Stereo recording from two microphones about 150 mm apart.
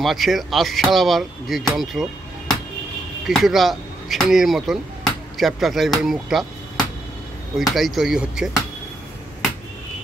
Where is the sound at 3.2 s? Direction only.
Centre (ahead or behind).